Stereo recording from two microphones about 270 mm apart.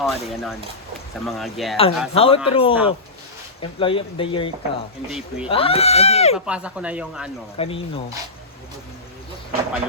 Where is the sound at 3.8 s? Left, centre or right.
Centre.